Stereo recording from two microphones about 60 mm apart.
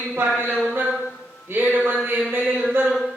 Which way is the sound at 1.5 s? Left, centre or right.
Right.